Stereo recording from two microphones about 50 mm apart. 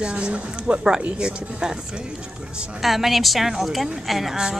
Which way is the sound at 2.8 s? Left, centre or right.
Centre.